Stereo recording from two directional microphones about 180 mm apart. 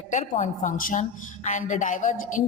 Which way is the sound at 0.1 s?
45° left (ahead or behind).